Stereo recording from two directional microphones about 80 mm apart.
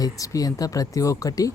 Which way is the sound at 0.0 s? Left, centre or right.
Left.